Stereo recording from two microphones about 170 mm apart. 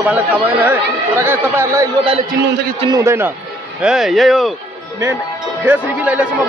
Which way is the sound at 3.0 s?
15° right (ahead or behind).